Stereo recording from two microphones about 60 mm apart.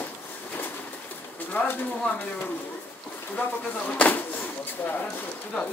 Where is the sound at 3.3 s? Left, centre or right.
Left.